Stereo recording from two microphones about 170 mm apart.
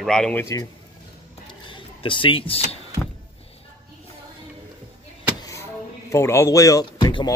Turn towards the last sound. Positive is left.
turn(degrees=25)  # may be behind; listen again after turning